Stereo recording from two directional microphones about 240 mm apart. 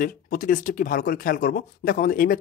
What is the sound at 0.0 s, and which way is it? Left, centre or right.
Speech, left.